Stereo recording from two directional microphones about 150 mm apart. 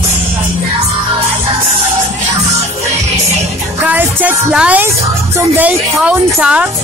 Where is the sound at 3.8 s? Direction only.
10° right (ahead or behind).